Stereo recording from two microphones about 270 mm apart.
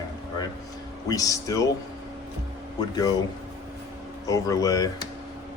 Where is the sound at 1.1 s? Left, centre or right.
Centre.